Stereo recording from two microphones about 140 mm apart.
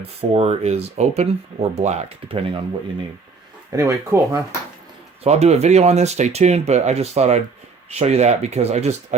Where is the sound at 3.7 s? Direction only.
20° right (ahead or behind).